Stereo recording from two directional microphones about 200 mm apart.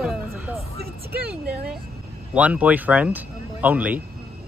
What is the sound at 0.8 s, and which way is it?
Speech, 50° right (ahead or behind).